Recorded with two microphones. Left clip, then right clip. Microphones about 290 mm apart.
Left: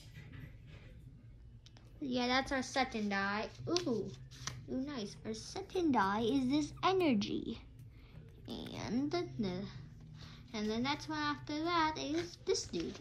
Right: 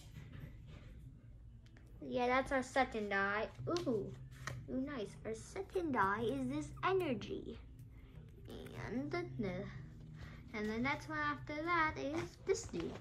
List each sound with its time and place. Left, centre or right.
2.0 s a woman's voice: centre